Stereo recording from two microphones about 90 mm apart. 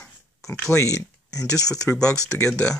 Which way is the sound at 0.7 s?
35° left (ahead or behind).